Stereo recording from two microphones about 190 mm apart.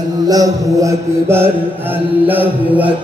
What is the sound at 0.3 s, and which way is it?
Mantra, 15° right (ahead or behind).